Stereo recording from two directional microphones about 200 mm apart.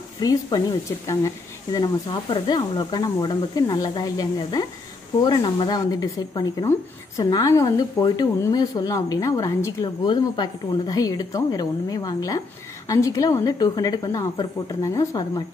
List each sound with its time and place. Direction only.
0.2 s a woman's voice: 20° left (ahead or behind)